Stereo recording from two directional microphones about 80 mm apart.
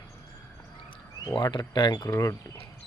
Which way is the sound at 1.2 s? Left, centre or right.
Left.